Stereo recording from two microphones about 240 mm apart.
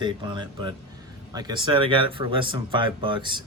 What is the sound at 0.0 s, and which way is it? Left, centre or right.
Speech, centre.